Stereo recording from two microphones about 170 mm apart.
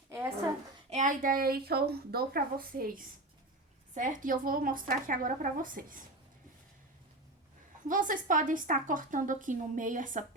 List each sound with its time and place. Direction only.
0.1 s a sound: 15° right (ahead or behind)
0.9 s a woman's voice: 45° right (ahead or behind)
7.9 s a woman's voice: 50° right (ahead or behind)